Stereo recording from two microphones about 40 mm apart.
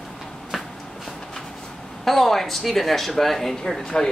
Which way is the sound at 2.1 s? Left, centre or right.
Centre.